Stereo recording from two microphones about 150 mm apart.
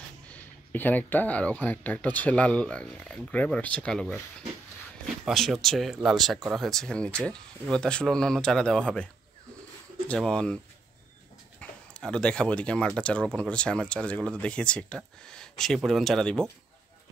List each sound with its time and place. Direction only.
0.3 s speech: 10° left (ahead or behind)
5.2 s speech: centre (ahead or behind)
11.9 s speech: 5° left (ahead or behind)